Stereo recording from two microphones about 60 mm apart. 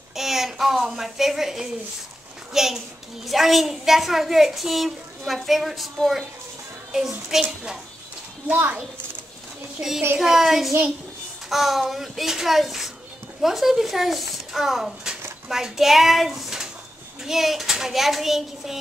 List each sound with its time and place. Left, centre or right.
0.1 s a woman's voice: centre
8.5 s a child's voice: right
9.8 s a woman's voice: centre